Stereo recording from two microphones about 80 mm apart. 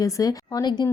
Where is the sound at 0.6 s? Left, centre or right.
Left.